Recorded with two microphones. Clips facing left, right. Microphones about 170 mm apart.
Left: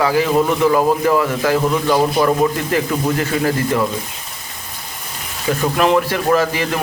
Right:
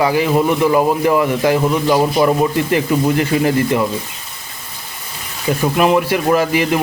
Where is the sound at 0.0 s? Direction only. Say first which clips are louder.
Right 1 dB; 15° right (ahead or behind).